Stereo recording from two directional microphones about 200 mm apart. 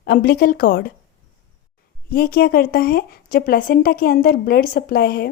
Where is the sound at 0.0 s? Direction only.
50° left (ahead or behind).